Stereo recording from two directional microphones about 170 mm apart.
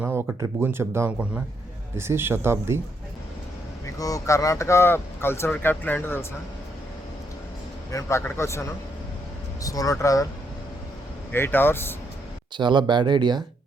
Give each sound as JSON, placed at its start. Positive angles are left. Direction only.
{"t": 0.0, "sound": "speech", "side_deg": -10}
{"t": 3.8, "sound": "speech", "side_deg": 20}
{"t": 7.9, "sound": "speech", "side_deg": 15}
{"t": 9.6, "sound": "speech", "side_deg": 20}
{"t": 11.3, "sound": "speech", "side_deg": 10}
{"t": 12.5, "sound": "speech", "side_deg": -25}